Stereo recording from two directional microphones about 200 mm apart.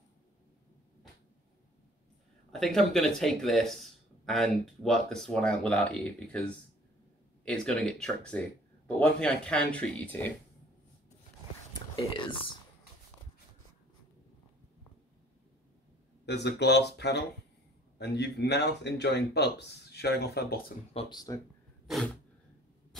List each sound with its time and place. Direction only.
2.6 s speech: centre (ahead or behind)
7.4 s speech: 5° left (ahead or behind)
16.3 s speech: 60° left (ahead or behind)
20.9 s speech: 25° left (ahead or behind)
21.8 s a sound: centre (ahead or behind)